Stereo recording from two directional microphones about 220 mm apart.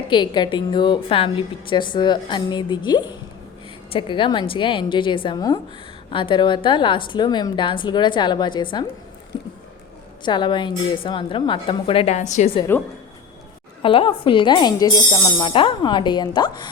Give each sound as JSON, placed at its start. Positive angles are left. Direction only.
{"t": 0.1, "sound": "a woman's voice", "side_deg": 20}
{"t": 10.2, "sound": "a woman's voice", "side_deg": 20}
{"t": 12.7, "sound": "a woman's voice", "side_deg": 10}
{"t": 13.8, "sound": "a woman's voice", "side_deg": 25}